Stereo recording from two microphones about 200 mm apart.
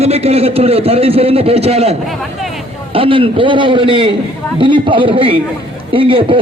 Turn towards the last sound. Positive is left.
turn(degrees=-25)  # may be behind; listen again after turning